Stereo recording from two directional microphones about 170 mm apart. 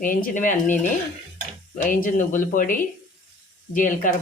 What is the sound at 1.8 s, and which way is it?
Speech, 55° left (ahead or behind).